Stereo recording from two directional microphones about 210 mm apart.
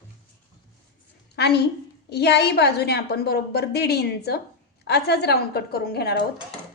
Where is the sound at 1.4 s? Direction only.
50° left (ahead or behind).